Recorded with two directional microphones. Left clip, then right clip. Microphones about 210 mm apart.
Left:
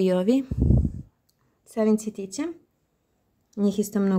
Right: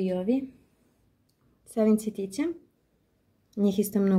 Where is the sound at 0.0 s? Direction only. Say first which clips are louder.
Left 6 dB; 60° left (ahead or behind).